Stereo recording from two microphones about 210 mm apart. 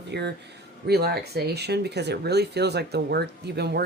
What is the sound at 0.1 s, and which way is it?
Speech, 55° right (ahead or behind).